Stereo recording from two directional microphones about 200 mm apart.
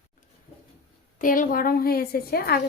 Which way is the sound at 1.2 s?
40° left (ahead or behind).